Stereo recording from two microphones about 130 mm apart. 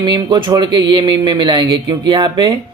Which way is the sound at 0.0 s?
35° right (ahead or behind).